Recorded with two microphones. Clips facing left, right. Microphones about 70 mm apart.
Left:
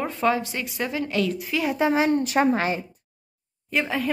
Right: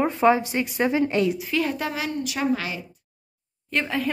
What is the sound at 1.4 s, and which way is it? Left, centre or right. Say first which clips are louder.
Speech: right 1 dB; centre.